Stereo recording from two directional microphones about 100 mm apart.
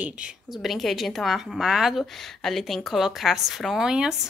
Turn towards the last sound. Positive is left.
turn(degrees=-5)  # may be behind; listen again after turning